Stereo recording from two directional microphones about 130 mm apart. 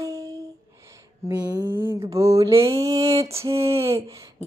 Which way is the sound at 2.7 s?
25° right (ahead or behind).